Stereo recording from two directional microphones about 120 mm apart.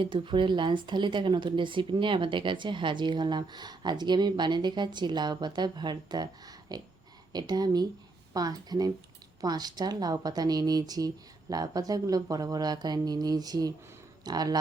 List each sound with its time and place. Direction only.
0.0 s speech: 45° right (ahead or behind)